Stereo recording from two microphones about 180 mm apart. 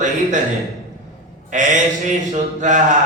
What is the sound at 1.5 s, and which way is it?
Speech, 45° right (ahead or behind).